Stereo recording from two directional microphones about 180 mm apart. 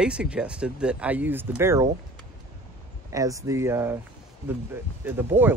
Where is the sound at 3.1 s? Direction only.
20° right (ahead or behind).